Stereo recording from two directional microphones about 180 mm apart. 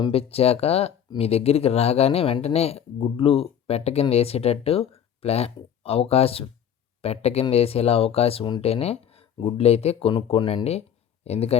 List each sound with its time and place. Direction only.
0.0 s speech: 35° left (ahead or behind)